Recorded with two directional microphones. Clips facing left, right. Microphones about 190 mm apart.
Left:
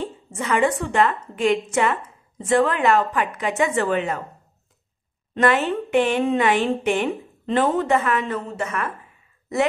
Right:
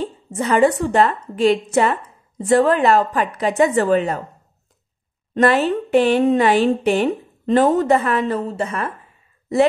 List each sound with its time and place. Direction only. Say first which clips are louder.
0.0 s a woman's voice: right 5 dB; 35° right (ahead or behind)
5.3 s speech: right 4 dB; 35° right (ahead or behind)